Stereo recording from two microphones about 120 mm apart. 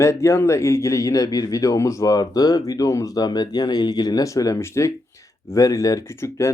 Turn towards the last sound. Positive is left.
turn(degrees=25)  # may be behind; listen again after turning